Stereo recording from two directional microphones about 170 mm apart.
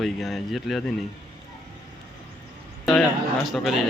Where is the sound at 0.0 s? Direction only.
Centre (ahead or behind).